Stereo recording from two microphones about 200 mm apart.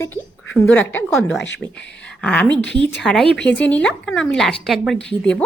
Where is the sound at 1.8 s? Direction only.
60° left (ahead or behind).